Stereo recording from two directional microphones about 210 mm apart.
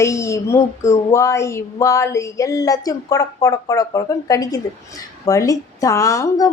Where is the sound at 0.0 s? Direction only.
15° left (ahead or behind).